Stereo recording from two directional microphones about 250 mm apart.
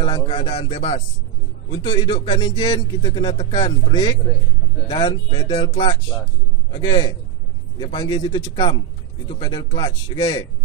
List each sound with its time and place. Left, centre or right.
0.0 s speech: left